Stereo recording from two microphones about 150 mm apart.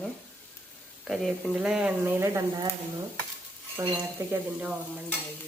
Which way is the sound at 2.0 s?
15° right (ahead or behind).